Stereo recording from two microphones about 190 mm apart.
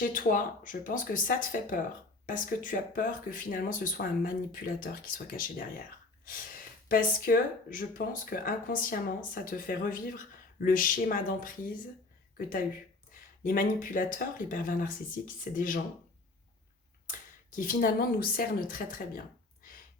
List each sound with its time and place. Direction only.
0.0 s speech: 45° left (ahead or behind)
6.8 s speech: 50° left (ahead or behind)
13.1 s speech: 45° left (ahead or behind)
17.1 s speech: 45° left (ahead or behind)